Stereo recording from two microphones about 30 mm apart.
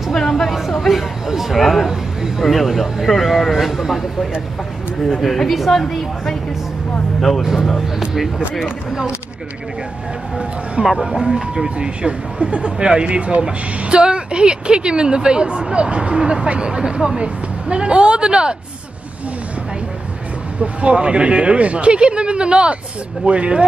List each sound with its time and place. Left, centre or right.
0.1 s a sound: centre
0.5 s a sound: centre
0.7 s speech: centre
1.2 s speech: centre
1.5 s speech: centre
1.9 s a man's voice: centre
2.4 s speech: centre
5.8 s a woman's voice: centre
8.1 s speech: centre
11.1 s a woman's voice: centre; by 12.7 s right
12.7 s a woman's voice: right
20.6 s a woman's voice: right